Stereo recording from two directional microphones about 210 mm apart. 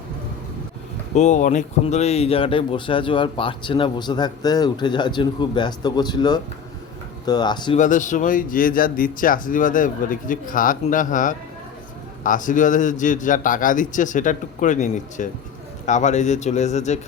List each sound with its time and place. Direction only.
1.1 s speech: 35° left (ahead or behind)
7.8 s speech: 35° left (ahead or behind)